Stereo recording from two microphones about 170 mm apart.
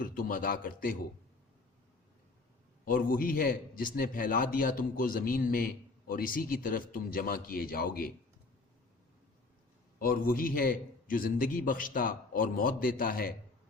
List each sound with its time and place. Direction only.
0.0 s a man's voice: 55° left (ahead or behind)
2.8 s a man's voice: 55° left (ahead or behind)
10.0 s a man's voice: 60° left (ahead or behind)